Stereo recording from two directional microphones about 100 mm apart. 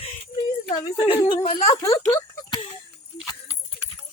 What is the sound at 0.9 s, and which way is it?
Speech, 65° left (ahead or behind).